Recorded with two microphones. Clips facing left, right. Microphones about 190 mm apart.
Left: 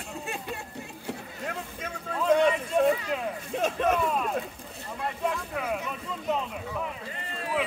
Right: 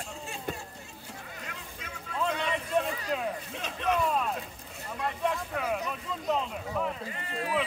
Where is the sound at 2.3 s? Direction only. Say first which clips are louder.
Left 18 dB; 45° left (ahead or behind).